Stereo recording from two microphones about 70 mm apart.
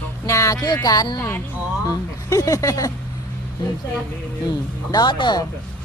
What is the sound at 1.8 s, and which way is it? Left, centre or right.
Speech, left.